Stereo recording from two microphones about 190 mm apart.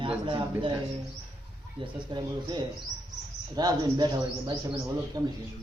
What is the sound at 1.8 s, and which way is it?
A man's voice, 25° right (ahead or behind).